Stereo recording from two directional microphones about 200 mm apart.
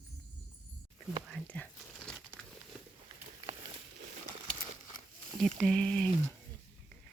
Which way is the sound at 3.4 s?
25° right (ahead or behind).